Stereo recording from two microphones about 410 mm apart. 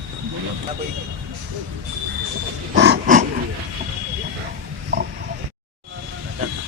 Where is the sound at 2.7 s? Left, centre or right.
Right.